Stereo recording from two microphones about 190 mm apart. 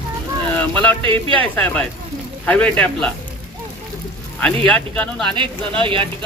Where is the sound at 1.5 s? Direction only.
5° left (ahead or behind).